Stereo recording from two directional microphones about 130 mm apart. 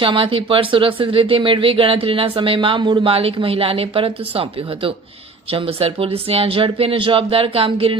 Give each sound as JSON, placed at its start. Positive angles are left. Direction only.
{"t": 0.0, "sound": "speech", "side_deg": -45}